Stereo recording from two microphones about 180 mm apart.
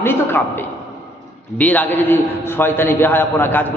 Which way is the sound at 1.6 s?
10° left (ahead or behind).